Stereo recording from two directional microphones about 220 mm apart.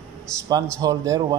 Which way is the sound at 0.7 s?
15° right (ahead or behind).